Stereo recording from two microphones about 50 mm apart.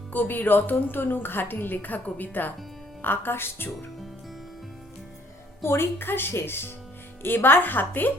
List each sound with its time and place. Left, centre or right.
0.1 s a woman's voice: left
5.6 s a woman's voice: left